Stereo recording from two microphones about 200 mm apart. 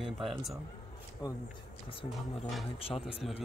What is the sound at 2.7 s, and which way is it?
Speech, 30° left (ahead or behind).